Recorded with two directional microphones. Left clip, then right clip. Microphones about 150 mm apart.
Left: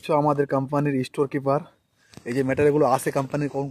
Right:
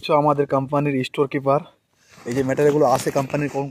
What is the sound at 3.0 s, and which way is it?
Speech, 30° right (ahead or behind).